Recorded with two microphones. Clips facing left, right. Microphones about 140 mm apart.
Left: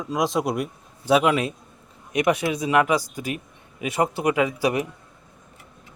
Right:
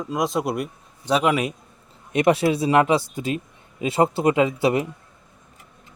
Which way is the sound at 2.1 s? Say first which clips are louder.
Right 3 dB; 30° right (ahead or behind).